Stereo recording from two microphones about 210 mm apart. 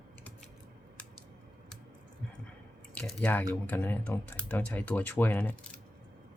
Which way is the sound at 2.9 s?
5° left (ahead or behind).